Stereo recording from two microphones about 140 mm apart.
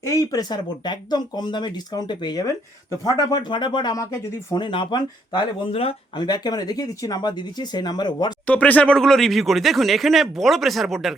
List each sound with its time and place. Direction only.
0.0 s speech: 25° left (ahead or behind)
4.5 s speech: 35° left (ahead or behind)
6.2 s speech: 30° left (ahead or behind)
8.4 s speech: 10° left (ahead or behind)